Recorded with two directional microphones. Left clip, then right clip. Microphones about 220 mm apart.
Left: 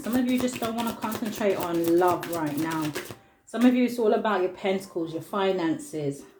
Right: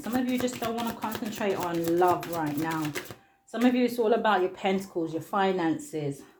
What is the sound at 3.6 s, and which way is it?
Speech, 30° right (ahead or behind).